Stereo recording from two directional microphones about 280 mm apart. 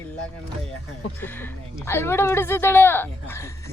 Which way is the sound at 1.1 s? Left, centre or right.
Centre.